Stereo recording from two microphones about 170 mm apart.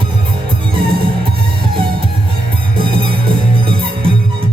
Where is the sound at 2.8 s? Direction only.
30° right (ahead or behind).